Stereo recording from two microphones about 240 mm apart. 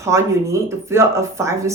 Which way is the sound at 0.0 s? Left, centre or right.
Centre.